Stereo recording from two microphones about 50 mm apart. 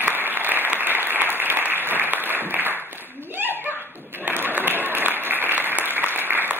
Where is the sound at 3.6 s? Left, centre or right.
Right.